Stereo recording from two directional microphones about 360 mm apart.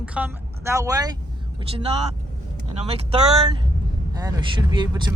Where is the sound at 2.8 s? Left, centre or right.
Centre.